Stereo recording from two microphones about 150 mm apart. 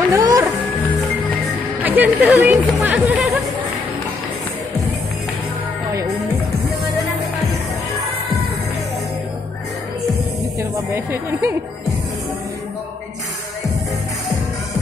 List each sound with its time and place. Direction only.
0.1 s music: 25° right (ahead or behind)
1.8 s music: 10° right (ahead or behind)
2.2 s speech: 10° right (ahead or behind)
10.6 s speech: 15° right (ahead or behind)